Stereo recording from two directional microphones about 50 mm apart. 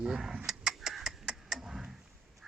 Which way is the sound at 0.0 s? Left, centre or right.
Centre.